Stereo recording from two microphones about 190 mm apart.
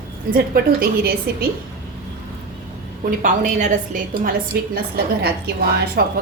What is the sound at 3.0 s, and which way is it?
A woman's voice, 45° right (ahead or behind).